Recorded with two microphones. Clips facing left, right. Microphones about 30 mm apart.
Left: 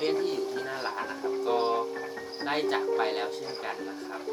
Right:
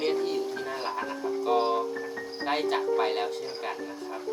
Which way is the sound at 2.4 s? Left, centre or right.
Centre.